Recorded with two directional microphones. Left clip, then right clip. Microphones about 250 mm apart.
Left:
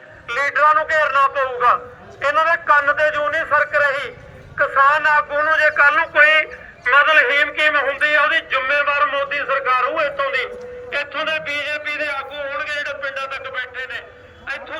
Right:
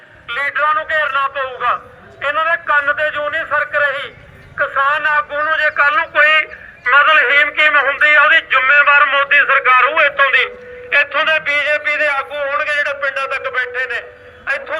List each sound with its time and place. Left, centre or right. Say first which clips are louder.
0.3 s a man's voice: left 1 dB; centre